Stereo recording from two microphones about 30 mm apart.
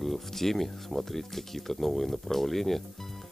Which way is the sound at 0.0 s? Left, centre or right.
Centre.